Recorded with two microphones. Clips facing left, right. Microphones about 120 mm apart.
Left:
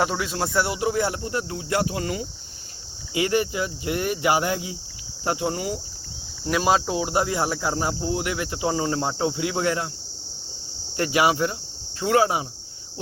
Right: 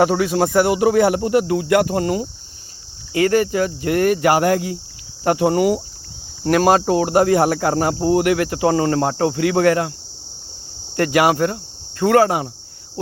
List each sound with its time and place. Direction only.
0.0 s speech: 60° right (ahead or behind)
1.9 s speech: 45° right (ahead or behind); by 5.8 s 75° right (ahead or behind)
6.4 s speech: 60° right (ahead or behind)
10.9 s cricket: 60° right (ahead or behind)